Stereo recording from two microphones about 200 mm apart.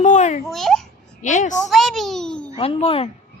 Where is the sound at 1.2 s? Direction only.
35° left (ahead or behind).